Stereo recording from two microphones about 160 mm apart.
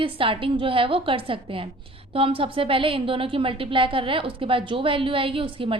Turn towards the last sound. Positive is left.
turn(degrees=-35)  # may be behind; listen again after turning